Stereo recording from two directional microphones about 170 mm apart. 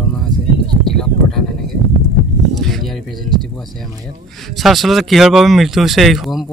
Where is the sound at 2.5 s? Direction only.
Centre (ahead or behind).